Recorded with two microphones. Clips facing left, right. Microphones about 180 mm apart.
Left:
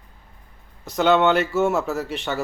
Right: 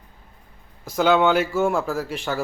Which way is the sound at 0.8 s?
Centre (ahead or behind).